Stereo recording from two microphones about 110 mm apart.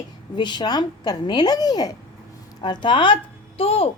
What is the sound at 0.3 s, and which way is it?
A woman's voice, 40° left (ahead or behind).